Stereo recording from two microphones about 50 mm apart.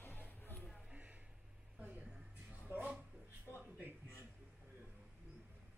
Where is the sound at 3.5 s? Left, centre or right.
Right.